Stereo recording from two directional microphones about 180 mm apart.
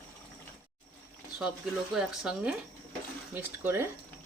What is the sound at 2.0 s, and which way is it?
Speech, 5° right (ahead or behind).